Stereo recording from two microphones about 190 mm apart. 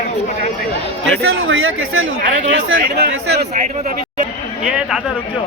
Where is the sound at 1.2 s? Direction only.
90° right.